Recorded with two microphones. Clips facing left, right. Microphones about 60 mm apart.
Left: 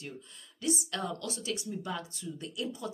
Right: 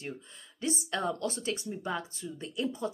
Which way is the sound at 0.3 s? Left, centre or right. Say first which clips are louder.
Left 2 dB; right.